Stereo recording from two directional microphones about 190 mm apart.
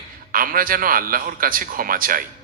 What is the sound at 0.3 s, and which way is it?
A man's voice, 50° right (ahead or behind).